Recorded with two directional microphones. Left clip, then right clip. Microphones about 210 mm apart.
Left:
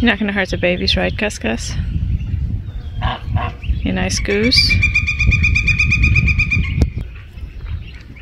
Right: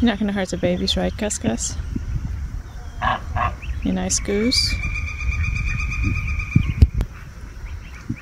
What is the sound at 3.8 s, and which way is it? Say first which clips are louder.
Speech: left 4 dB; 10° right (ahead or behind).